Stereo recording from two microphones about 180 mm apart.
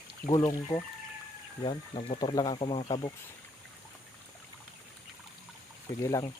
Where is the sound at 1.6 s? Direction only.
30° left (ahead or behind).